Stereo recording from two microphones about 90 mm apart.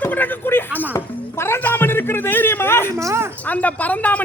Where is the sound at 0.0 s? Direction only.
20° left (ahead or behind).